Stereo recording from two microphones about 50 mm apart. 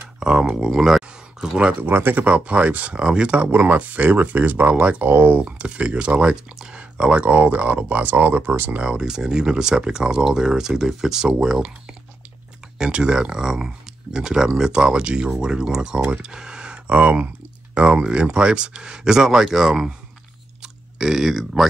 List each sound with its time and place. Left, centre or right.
0.2 s speech: centre
1.8 s speech: right
2.2 s speech: right
3.0 s speech: centre
5.1 s speech: right
5.4 s speech: right
8.8 s speech: centre
12.7 s speech: centre